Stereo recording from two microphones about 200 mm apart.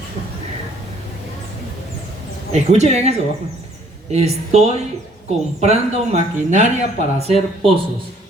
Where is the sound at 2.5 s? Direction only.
35° right (ahead or behind).